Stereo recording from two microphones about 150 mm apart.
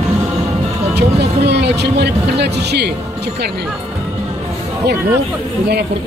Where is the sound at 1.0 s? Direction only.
90° right.